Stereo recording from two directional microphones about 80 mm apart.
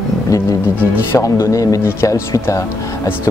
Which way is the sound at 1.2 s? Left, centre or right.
Left.